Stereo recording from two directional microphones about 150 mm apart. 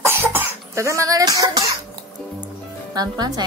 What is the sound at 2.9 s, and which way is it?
Speech, 25° right (ahead or behind).